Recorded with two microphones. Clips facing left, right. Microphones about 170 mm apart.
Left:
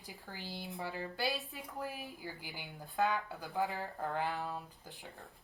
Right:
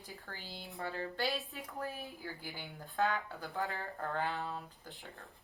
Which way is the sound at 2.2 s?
10° left (ahead or behind).